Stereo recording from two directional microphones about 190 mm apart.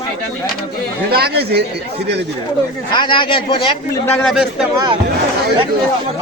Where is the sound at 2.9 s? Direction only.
25° left (ahead or behind).